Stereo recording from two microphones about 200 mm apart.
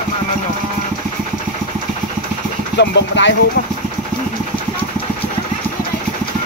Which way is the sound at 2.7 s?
60° left (ahead or behind).